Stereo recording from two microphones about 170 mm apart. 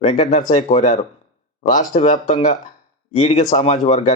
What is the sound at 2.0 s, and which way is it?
Speech, 45° left (ahead or behind).